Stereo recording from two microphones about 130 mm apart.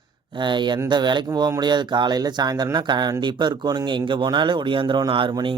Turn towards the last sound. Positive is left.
turn(degrees=-40)  # may be behind; listen again after turning